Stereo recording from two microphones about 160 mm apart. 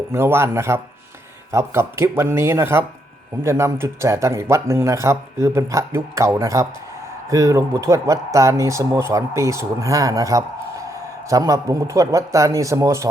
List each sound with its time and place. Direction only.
0.1 s speech: 15° right (ahead or behind)